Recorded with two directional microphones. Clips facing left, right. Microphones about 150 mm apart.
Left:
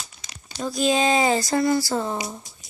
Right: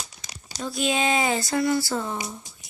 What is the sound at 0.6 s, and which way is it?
Speech, 40° left (ahead or behind).